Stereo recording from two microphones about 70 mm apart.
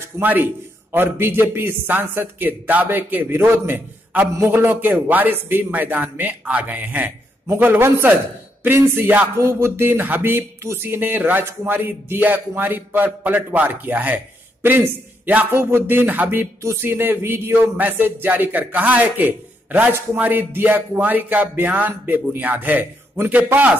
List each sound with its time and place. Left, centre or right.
0.2 s speech: right
9.4 s speech: right